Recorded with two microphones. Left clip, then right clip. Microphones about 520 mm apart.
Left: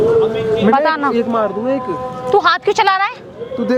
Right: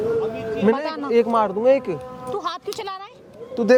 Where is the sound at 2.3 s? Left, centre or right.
Left.